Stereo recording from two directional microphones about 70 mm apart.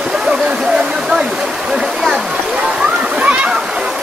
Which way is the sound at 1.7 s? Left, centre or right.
Centre.